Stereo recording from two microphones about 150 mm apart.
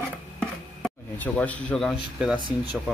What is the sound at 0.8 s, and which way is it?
A man's voice, 10° left (ahead or behind).